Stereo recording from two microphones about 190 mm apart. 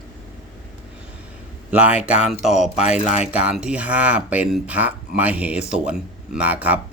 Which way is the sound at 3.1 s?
35° left (ahead or behind).